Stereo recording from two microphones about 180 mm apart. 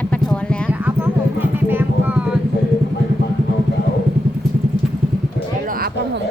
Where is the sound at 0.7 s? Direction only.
10° right (ahead or behind).